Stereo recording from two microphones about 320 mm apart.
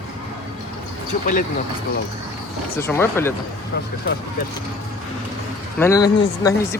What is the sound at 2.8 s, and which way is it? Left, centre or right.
Speech, centre.